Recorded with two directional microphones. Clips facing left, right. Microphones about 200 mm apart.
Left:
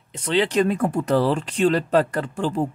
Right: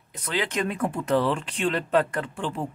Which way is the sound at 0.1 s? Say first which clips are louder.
Left 8 dB; 30° left (ahead or behind).